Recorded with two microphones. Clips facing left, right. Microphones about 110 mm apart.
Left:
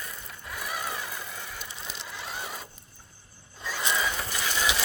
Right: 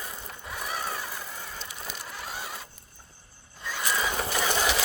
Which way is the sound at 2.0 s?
15° right (ahead or behind).